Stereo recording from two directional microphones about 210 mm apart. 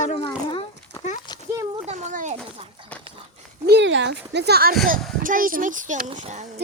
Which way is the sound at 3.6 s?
55° right (ahead or behind).